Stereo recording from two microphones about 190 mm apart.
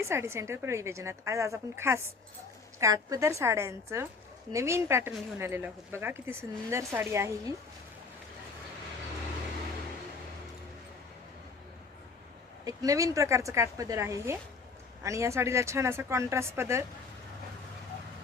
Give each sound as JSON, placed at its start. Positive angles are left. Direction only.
{"t": 0.0, "sound": "speech", "side_deg": -15}
{"t": 12.6, "sound": "speech", "side_deg": -20}